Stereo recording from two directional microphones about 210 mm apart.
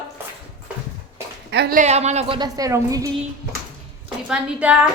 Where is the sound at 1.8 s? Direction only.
30° right (ahead or behind).